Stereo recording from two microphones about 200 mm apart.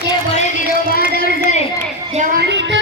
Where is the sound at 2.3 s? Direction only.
55° right (ahead or behind).